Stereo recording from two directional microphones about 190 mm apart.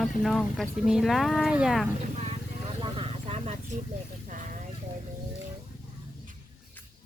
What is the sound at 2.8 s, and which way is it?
Vehicle, 30° right (ahead or behind).